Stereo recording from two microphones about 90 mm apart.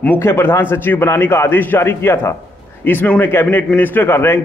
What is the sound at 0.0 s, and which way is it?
A man's voice, 25° left (ahead or behind).